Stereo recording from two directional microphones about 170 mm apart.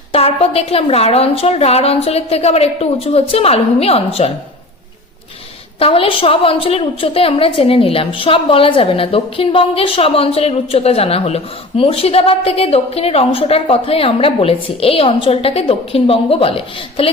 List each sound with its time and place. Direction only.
0.1 s a woman's voice: 35° left (ahead or behind)
5.8 s a woman's voice: 35° left (ahead or behind)